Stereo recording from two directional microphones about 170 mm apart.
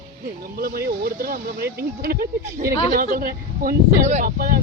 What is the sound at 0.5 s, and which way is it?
Speech, 60° right (ahead or behind).